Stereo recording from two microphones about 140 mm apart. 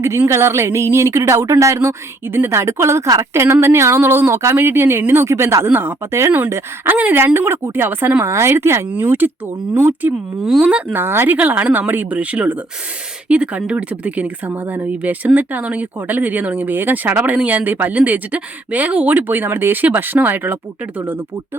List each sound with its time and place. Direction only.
0.0 s speech: 20° right (ahead or behind)
10.4 s speech: 5° right (ahead or behind)